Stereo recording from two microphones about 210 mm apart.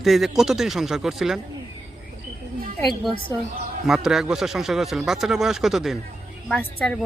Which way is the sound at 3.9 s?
Centre (ahead or behind).